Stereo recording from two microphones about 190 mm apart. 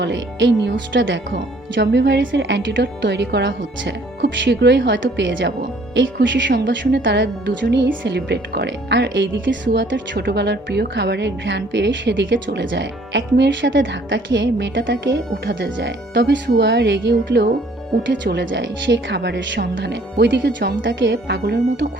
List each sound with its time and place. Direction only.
0.0 s speech: 70° right (ahead or behind)